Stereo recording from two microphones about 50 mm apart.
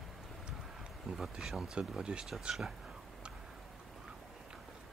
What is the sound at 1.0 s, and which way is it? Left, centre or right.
Speech, centre.